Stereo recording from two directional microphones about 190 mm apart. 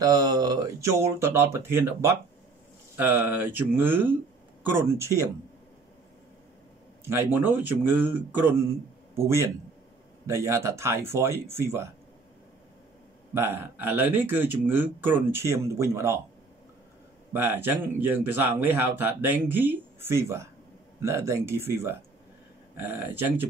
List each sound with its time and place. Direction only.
0.0 s speech: 20° right (ahead or behind)
7.1 s speech: 10° right (ahead or behind)
13.3 s speech: 10° right (ahead or behind)
17.3 s speech: 10° right (ahead or behind)